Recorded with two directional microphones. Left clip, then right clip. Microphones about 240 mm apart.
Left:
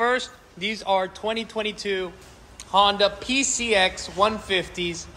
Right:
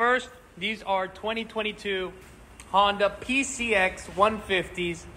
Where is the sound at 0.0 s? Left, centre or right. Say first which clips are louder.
Left 1 dB; centre.